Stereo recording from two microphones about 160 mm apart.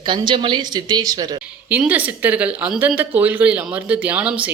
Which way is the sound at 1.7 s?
10° right (ahead or behind).